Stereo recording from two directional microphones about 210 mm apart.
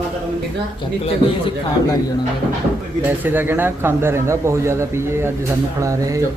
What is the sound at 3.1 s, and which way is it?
Speech, 10° right (ahead or behind).